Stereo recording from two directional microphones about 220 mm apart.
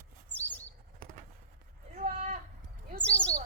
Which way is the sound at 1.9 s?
35° right (ahead or behind).